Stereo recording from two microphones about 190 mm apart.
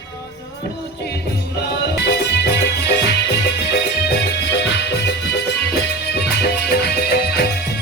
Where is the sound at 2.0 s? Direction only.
60° left (ahead or behind).